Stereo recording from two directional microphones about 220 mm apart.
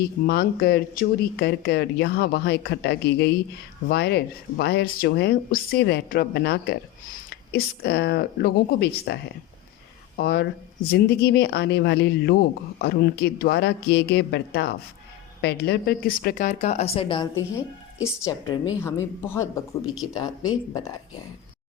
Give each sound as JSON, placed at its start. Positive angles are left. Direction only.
{"t": 0.0, "sound": "speech", "side_deg": 45}
{"t": 10.2, "sound": "speech", "side_deg": 45}
{"t": 18.0, "sound": "a woman's voice", "side_deg": 15}